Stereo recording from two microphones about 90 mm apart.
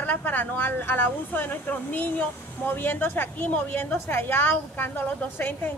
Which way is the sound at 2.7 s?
20° left (ahead or behind).